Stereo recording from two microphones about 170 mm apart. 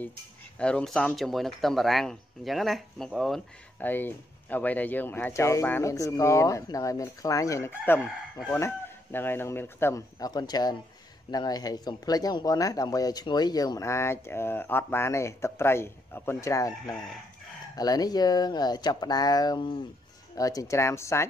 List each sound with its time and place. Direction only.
0.6 s speech: 5° left (ahead or behind)
16.8 s chicken: centre (ahead or behind)
17.7 s speech: 20° left (ahead or behind)